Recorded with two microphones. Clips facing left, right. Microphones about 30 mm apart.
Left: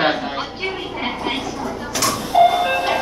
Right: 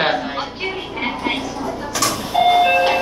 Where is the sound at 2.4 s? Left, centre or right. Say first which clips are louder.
Right 3 dB; right.